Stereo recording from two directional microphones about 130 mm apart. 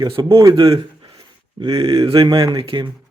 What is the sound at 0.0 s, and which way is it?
Speech, 40° right (ahead or behind).